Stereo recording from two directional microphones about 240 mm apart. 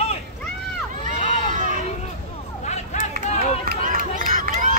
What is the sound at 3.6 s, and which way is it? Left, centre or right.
Run, right.